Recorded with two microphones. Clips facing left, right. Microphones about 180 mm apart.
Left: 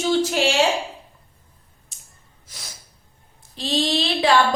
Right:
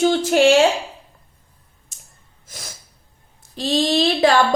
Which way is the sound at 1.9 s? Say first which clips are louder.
Right 2 dB; 45° right (ahead or behind).